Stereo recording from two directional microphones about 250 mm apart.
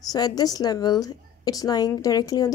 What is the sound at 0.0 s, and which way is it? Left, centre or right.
A woman's voice, centre.